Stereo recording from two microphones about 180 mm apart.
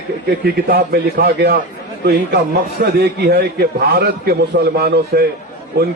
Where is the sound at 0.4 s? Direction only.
60° right (ahead or behind).